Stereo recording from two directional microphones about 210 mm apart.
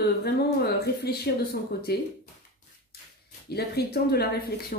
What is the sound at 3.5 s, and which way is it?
Speech, 50° left (ahead or behind).